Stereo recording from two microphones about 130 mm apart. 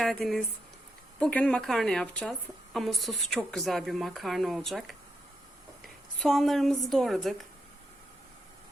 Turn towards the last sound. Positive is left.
turn(degrees=0)  # may be behind; listen again after turning